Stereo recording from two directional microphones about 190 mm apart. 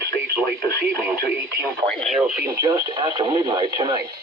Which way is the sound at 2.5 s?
20° right (ahead or behind).